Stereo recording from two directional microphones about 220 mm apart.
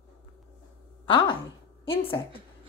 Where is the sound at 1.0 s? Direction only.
25° left (ahead or behind).